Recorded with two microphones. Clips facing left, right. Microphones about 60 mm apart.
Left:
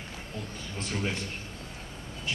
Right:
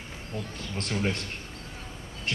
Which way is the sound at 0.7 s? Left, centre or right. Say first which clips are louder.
Right 3 dB; right.